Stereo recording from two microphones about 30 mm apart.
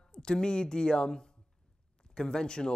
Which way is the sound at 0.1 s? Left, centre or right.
Left.